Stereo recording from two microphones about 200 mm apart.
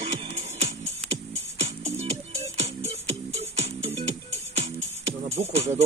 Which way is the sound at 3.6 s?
30° right (ahead or behind).